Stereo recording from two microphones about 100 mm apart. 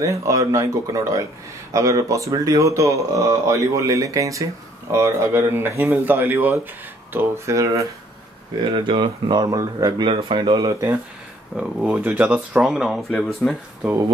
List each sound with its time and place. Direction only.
0.0 s speech: 35° right (ahead or behind)
8.7 s speech: 55° right (ahead or behind)
10.6 s speech: 30° right (ahead or behind)
11.5 s speech: 10° right (ahead or behind)
12.5 s speech: 5° right (ahead or behind)
13.4 s speech: 15° left (ahead or behind)